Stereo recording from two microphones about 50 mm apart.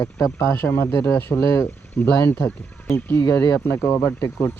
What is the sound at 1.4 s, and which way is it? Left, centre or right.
Speech, left.